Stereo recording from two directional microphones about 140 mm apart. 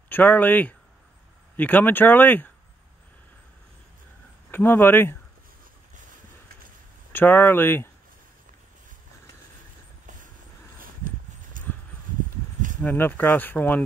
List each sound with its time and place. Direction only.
0.1 s speech: 10° left (ahead or behind)
4.5 s speech: 15° left (ahead or behind)
7.1 s speech: 15° left (ahead or behind)
10.8 s clip-clop: 75° right (ahead or behind)
12.8 s speech: 15° left (ahead or behind)